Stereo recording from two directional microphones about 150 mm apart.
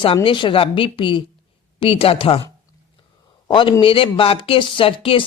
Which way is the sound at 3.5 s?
35° left (ahead or behind).